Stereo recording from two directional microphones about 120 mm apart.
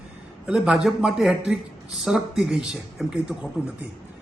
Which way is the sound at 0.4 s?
5° right (ahead or behind).